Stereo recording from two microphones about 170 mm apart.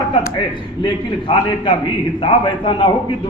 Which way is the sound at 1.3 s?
30° left (ahead or behind).